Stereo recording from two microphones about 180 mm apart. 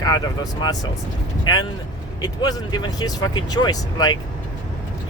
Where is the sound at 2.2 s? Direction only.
20° left (ahead or behind).